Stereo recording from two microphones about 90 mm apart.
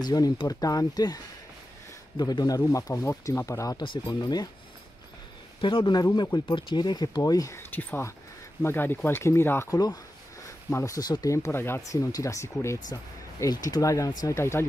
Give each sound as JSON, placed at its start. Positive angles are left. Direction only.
{"t": 0.0, "sound": "speech", "side_deg": 45}
{"t": 2.7, "sound": "speech", "side_deg": 35}
{"t": 3.8, "sound": "speech", "side_deg": 60}
{"t": 5.6, "sound": "speech", "side_deg": 65}
{"t": 6.5, "sound": "speech", "side_deg": 55}
{"t": 7.5, "sound": "speech", "side_deg": 20}
{"t": 9.7, "sound": "speech", "side_deg": 45}
{"t": 10.7, "sound": "speech", "side_deg": 30}
{"t": 11.0, "sound": "speech", "side_deg": 50}
{"t": 11.3, "sound": "speech", "side_deg": 30}